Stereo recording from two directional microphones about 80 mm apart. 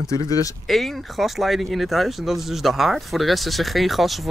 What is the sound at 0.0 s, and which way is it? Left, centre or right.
Speech, left.